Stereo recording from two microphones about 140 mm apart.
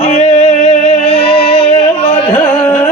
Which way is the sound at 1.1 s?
45° left (ahead or behind).